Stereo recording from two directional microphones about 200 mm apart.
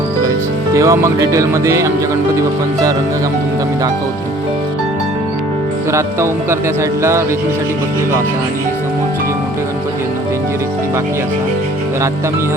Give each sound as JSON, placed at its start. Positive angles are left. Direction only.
{"t": 0.7, "sound": "speech", "side_deg": -15}
{"t": 5.9, "sound": "speech", "side_deg": -15}